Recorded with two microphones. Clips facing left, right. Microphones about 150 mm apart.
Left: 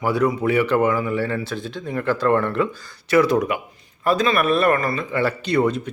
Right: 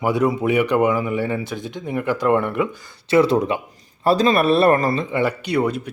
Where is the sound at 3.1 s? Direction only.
25° right (ahead or behind).